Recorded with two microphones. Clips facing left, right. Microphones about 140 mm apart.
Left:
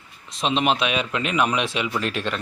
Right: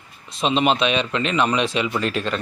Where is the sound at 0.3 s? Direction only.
Centre (ahead or behind).